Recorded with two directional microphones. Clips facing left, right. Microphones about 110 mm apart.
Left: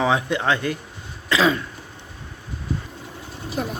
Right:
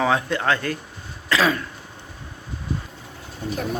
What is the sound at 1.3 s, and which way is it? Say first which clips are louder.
Cough: left 1 dB; 20° left (ahead or behind).